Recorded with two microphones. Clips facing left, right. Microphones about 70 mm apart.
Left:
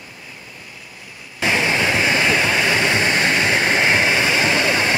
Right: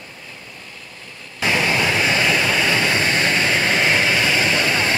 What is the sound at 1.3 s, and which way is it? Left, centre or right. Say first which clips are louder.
Vehicle: even; left.